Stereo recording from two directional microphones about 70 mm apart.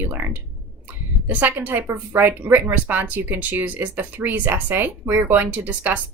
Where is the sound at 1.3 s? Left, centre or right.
Right.